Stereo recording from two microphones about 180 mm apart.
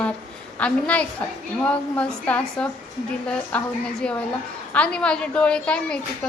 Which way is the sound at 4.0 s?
5° left (ahead or behind).